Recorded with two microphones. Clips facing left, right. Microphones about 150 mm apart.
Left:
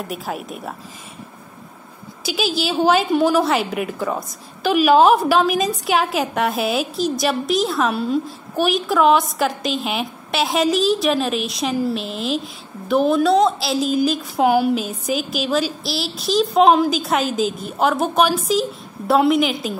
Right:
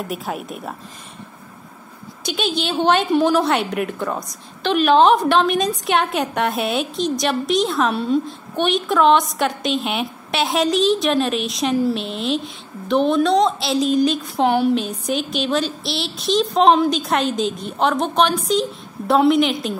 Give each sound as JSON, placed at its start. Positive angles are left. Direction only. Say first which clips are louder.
{"t": 0.0, "sound": "a woman's voice", "louder": "right 1 dB", "side_deg": 0}
{"t": 2.2, "sound": "a woman's voice", "louder": "left 1 dB", "side_deg": 5}